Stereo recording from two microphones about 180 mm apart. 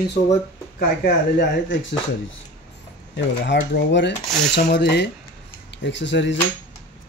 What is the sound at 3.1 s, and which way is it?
Speech, 80° left.